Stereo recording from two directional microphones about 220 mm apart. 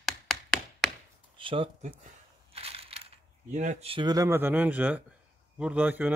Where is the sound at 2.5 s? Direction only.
25° right (ahead or behind).